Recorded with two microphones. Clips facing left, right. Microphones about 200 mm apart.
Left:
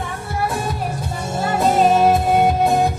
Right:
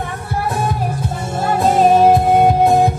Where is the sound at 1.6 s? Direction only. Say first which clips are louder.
Right 3 dB; 50° right (ahead or behind).